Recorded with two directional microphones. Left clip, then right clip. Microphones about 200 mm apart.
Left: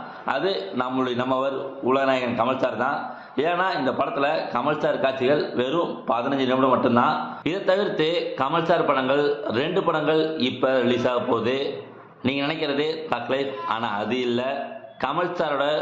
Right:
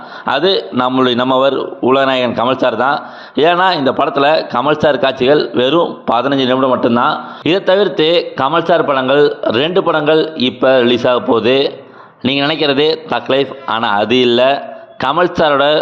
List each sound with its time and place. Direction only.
0.3 s a man's voice: 50° right (ahead or behind)